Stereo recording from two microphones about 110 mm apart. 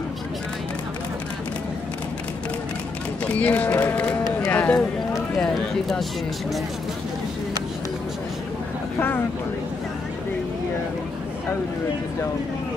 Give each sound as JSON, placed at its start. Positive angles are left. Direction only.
{"t": 3.3, "sound": "speech", "side_deg": 15}
{"t": 4.5, "sound": "a sound", "side_deg": 15}
{"t": 5.4, "sound": "speech", "side_deg": 0}